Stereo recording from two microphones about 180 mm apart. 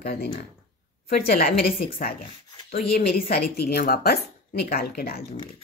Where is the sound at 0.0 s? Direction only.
60° left (ahead or behind).